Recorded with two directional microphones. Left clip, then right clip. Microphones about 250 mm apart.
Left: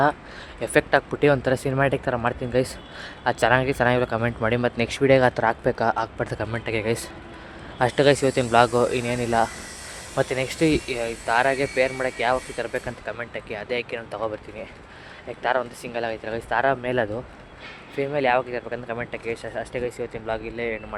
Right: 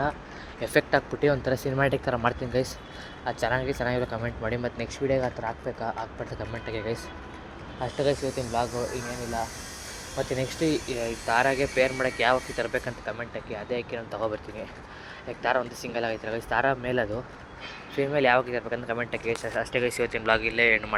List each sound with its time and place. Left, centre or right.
0.6 s speech: centre; by 9.5 s left
10.2 s speech: centre
15.4 s speech: centre